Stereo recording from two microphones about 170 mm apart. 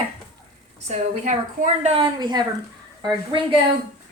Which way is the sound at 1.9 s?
25° right (ahead or behind).